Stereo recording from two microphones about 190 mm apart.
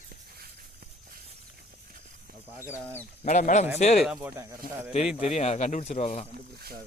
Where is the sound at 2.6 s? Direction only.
10° left (ahead or behind).